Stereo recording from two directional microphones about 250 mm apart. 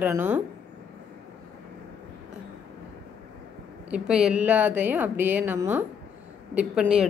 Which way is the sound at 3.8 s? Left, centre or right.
Centre.